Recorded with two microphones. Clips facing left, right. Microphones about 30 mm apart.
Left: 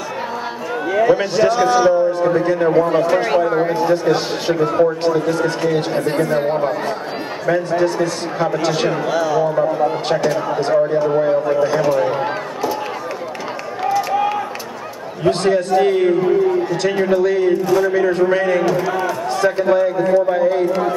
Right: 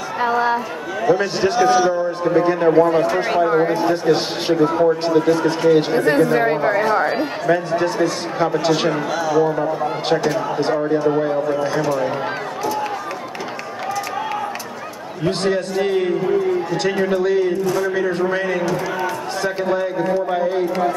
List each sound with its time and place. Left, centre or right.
0.2 s a man's voice: centre
0.9 s a man's voice: centre
1.3 s a man's voice: centre
1.8 s a man's voice: centre
2.3 s a man's voice: centre
3.3 s a man's voice: centre
5.0 s a man's voice: centre
13.9 s a sound: centre
15.2 s a man's voice: centre
17.5 s a man's voice: centre